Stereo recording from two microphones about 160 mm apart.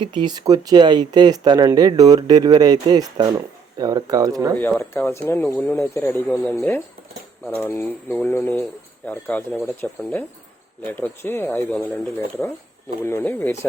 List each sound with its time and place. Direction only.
0.0 s speech: 30° right (ahead or behind)
4.8 s speech: 15° left (ahead or behind)
9.2 s speech: 5° left (ahead or behind)
13.0 s speech: 15° left (ahead or behind)